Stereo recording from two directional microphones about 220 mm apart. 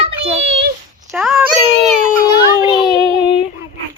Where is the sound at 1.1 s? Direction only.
Centre (ahead or behind).